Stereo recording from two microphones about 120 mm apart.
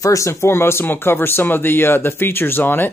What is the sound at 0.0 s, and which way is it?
Speech, 25° left (ahead or behind).